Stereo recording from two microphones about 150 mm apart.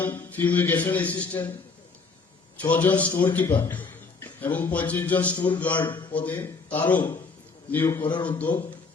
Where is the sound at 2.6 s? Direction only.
10° left (ahead or behind).